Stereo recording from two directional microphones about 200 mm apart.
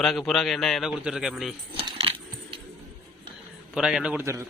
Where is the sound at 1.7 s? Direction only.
25° right (ahead or behind).